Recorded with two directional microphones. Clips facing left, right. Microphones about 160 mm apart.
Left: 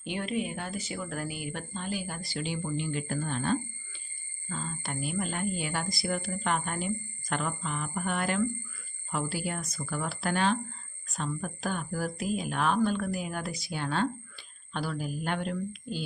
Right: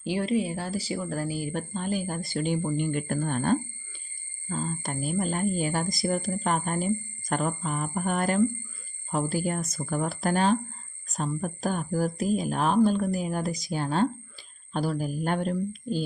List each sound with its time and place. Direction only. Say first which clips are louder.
0.0 s speech: right 6 dB; 30° right (ahead or behind)